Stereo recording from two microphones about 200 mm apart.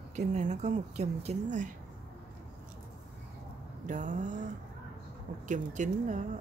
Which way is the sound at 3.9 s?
40° right (ahead or behind).